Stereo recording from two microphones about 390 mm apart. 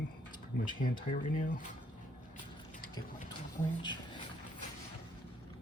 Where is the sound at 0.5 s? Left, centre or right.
Centre.